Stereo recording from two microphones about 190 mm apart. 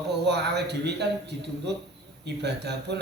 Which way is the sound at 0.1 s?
60° right (ahead or behind).